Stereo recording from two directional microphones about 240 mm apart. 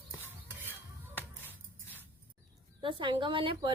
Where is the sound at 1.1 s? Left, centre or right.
Centre.